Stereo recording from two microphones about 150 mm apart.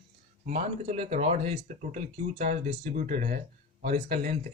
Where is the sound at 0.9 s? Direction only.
50° right (ahead or behind).